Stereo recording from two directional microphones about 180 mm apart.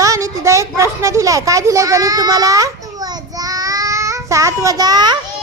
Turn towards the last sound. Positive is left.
turn(degrees=-20)  # may be behind; listen again after turning